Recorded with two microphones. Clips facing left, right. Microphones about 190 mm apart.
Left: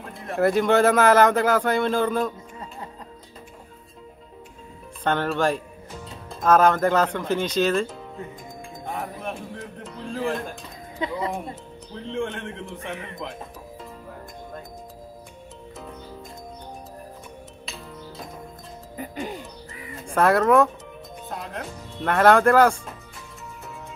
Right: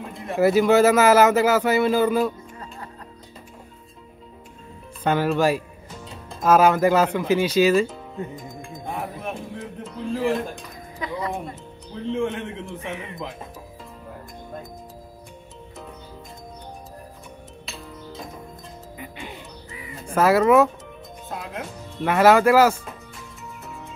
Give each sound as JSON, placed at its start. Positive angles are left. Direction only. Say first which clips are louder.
{"t": 0.1, "sound": "speech", "louder": "right 2 dB", "side_deg": 0}
{"t": 5.0, "sound": "speech", "louder": "right 3 dB", "side_deg": -5}
{"t": 8.9, "sound": "a sound", "louder": "right 1 dB", "side_deg": -5}
{"t": 11.0, "sound": "speech", "louder": "left 1 dB", "side_deg": 25}
{"t": 12.1, "sound": "speech", "louder": "right 4 dB", "side_deg": -5}
{"t": 18.9, "sound": "speech", "louder": "left 7 dB", "side_deg": 40}
{"t": 20.1, "sound": "speech", "louder": "right 2 dB", "side_deg": -5}